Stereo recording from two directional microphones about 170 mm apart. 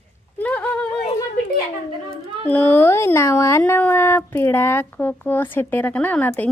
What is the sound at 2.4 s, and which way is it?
Speech, 10° left (ahead or behind).